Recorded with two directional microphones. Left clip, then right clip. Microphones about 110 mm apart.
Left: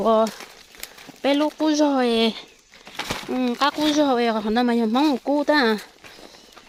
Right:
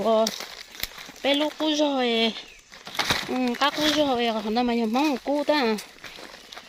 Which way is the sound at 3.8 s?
60° left (ahead or behind).